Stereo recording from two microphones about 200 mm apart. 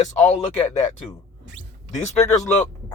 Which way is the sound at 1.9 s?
35° left (ahead or behind).